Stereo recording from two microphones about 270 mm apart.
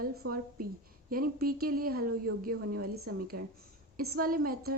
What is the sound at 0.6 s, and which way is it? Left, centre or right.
A woman's voice, right.